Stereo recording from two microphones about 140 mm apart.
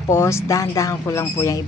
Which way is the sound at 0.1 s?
20° left (ahead or behind).